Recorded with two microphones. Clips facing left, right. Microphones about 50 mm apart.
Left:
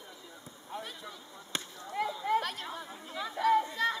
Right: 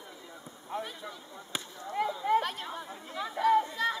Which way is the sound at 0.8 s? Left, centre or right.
Centre.